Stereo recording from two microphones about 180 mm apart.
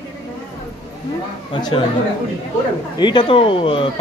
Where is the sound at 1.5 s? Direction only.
25° left (ahead or behind).